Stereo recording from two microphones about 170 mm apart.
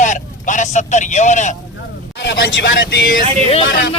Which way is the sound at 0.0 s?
45° left (ahead or behind).